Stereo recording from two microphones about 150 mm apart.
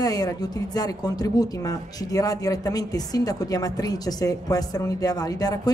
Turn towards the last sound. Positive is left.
turn(degrees=25)  # may be behind; listen again after turning